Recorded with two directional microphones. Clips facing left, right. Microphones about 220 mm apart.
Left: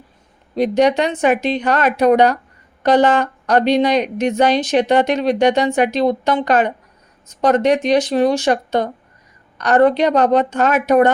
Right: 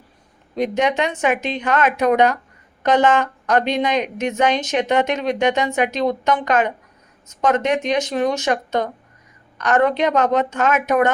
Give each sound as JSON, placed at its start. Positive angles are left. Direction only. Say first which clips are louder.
{"t": 0.5, "sound": "a woman's voice", "louder": "left 5 dB", "side_deg": 35}